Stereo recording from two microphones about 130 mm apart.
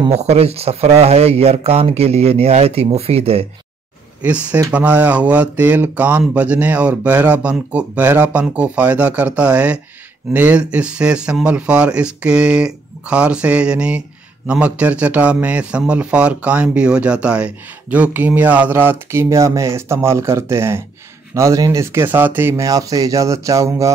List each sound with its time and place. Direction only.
0.1 s speech: 55° right (ahead or behind)
4.2 s a man's voice: 10° right (ahead or behind)